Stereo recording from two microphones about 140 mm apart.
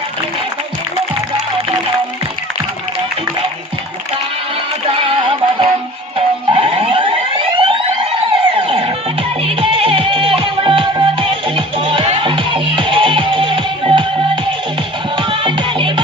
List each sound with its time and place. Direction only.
4.9 s music: 40° right (ahead or behind)